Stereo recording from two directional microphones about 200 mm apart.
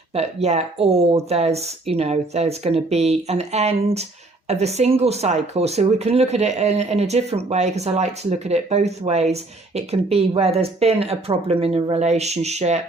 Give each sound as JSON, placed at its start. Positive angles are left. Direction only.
{"t": 0.1, "sound": "speech", "side_deg": -30}